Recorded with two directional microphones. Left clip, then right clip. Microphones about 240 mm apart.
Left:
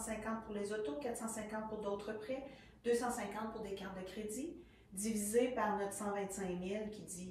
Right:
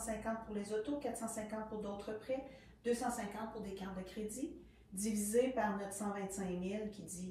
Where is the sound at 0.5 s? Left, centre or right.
Right.